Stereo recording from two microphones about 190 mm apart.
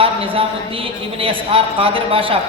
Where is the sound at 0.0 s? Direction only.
30° right (ahead or behind).